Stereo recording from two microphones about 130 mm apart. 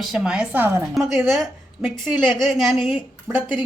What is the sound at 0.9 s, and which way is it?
Speech, centre (ahead or behind).